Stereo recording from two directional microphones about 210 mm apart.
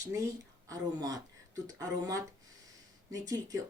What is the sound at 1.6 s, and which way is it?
Speech, 15° right (ahead or behind).